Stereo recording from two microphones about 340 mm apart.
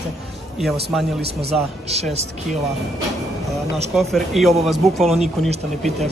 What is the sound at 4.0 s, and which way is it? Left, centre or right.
Speech, centre.